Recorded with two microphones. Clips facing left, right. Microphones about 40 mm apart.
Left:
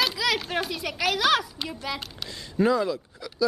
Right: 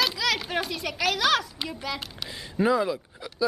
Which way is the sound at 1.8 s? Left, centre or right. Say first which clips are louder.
Left 1 dB; centre.